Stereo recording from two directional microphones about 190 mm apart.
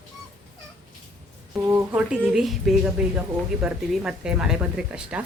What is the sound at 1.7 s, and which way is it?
Speech, 5° right (ahead or behind).